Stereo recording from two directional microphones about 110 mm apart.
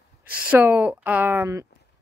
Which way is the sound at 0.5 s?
15° right (ahead or behind).